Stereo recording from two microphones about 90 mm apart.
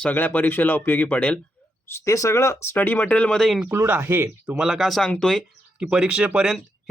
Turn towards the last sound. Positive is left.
turn(degrees=-10)  # may be behind; listen again after turning